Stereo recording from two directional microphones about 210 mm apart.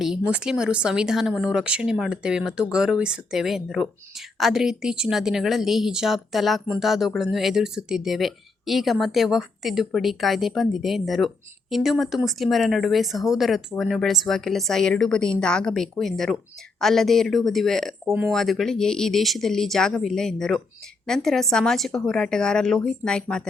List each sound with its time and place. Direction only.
0.0 s a woman's voice: 5° right (ahead or behind)